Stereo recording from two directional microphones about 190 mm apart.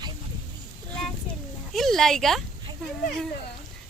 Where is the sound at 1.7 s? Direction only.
Centre (ahead or behind).